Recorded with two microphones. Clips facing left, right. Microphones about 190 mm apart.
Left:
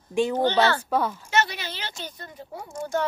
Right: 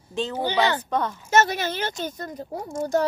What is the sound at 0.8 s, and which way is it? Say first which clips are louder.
Speech: left 1 dB; 5° left (ahead or behind).